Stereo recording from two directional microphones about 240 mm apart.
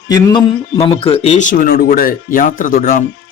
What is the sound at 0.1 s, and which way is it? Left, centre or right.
A man's voice, centre.